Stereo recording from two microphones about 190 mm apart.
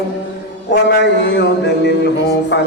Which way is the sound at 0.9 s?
65° left (ahead or behind).